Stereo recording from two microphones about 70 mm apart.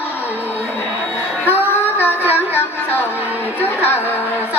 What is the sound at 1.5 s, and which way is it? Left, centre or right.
Music, left.